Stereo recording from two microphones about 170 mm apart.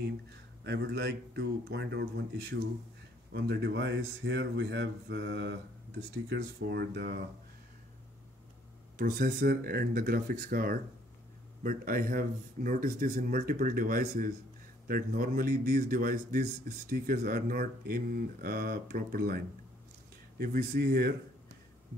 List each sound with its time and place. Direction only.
0.7 s speech: 80° right
3.3 s speech: 85° right
6.2 s speech: 70° right (ahead or behind)
8.9 s a man's voice: 55° right (ahead or behind)